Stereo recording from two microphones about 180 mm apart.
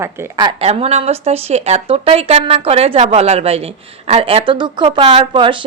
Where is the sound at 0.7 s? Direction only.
35° right (ahead or behind).